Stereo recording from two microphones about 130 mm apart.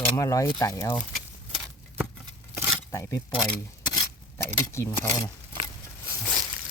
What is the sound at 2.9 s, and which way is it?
Speech, 25° left (ahead or behind).